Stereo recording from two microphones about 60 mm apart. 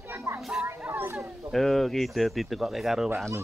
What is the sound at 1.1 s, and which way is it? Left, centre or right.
Speech, centre.